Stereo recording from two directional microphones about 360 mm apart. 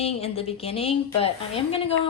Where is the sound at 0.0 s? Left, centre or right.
Centre.